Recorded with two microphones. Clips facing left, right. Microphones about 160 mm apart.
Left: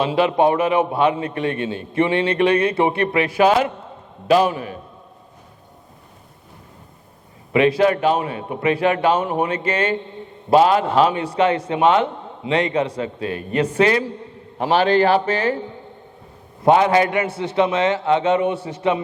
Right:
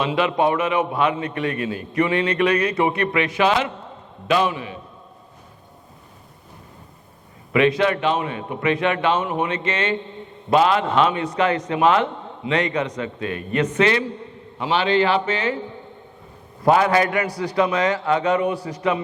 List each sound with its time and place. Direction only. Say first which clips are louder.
0.0 s a man's voice: left 3 dB; 30° left (ahead or behind)
7.5 s a man's voice: left 2 dB; 35° left (ahead or behind)
16.6 s a man's voice: left 2 dB; 25° left (ahead or behind)